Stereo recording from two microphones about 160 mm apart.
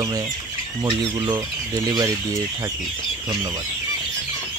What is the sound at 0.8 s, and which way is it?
Speech, 25° right (ahead or behind).